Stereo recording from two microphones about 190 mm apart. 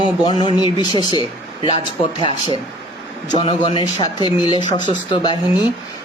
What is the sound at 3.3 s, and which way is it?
Speech, 25° left (ahead or behind).